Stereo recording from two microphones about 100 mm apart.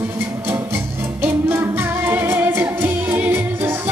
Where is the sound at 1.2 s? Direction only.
20° right (ahead or behind).